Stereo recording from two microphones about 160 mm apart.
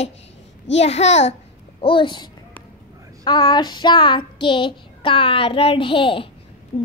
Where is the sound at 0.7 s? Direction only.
40° left (ahead or behind).